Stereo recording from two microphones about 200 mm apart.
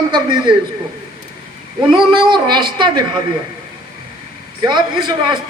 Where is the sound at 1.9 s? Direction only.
25° right (ahead or behind).